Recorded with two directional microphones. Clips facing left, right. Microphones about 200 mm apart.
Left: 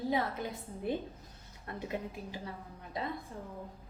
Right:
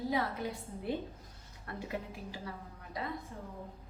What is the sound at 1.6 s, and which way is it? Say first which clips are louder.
Speech: left 2 dB; 20° left (ahead or behind).